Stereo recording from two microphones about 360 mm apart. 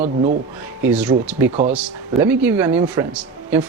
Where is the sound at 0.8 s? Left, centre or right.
Centre.